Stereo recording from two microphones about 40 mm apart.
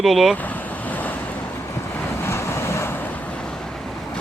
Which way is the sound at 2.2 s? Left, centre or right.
Left.